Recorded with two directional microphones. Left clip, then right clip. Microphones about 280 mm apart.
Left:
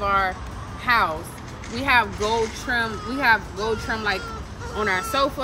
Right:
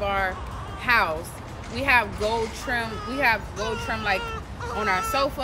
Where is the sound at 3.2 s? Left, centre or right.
Centre.